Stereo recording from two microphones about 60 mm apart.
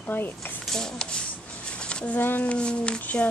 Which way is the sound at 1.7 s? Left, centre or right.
Centre.